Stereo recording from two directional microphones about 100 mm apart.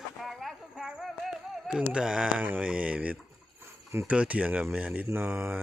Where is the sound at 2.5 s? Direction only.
15° right (ahead or behind).